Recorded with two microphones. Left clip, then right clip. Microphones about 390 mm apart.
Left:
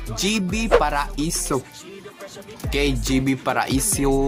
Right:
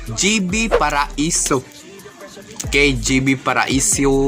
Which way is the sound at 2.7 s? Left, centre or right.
Left.